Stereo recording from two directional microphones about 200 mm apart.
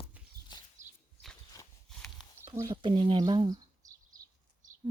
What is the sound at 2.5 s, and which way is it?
Speech, 20° right (ahead or behind).